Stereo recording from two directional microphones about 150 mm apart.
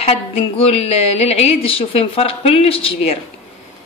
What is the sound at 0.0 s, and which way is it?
A woman's voice, 40° left (ahead or behind).